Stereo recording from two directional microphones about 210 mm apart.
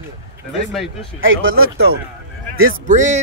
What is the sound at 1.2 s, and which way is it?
Speech, 70° right (ahead or behind).